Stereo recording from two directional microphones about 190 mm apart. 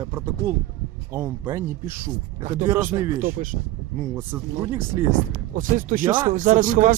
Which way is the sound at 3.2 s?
45° right (ahead or behind).